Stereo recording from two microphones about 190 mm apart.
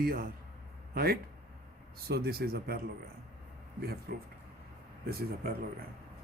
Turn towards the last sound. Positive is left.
turn(degrees=-55)  # may be behind; listen again after turning